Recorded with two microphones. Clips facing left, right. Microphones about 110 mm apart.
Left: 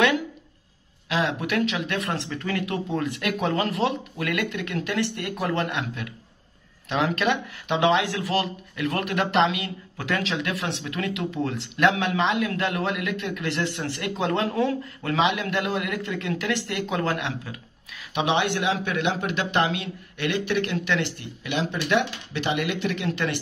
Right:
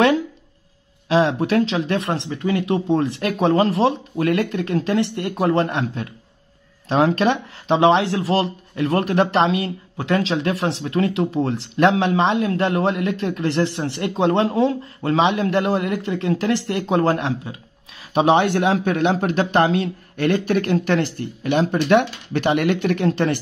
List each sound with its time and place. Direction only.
1.0 s speech: 30° right (ahead or behind)